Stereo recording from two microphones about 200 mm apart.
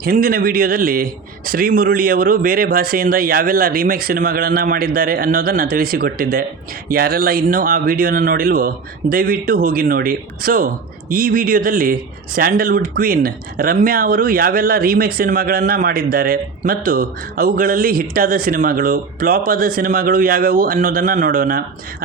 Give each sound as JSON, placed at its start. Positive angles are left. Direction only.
{"t": 0.0, "sound": "speech", "side_deg": -45}